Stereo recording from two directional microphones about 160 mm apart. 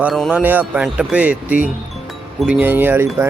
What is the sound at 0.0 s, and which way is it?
Speech, centre (ahead or behind).